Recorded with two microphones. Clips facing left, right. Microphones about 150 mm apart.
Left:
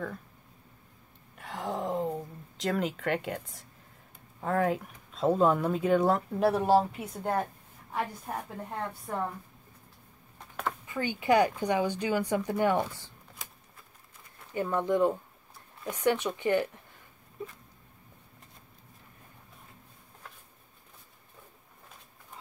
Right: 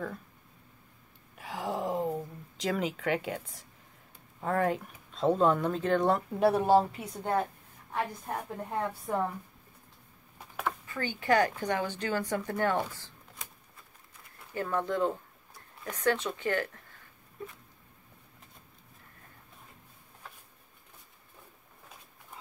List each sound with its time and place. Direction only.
1.3 s a sound: centre (ahead or behind)
4.4 s speech: centre (ahead or behind)
10.9 s speech: 15° left (ahead or behind)
14.5 s speech: 15° left (ahead or behind)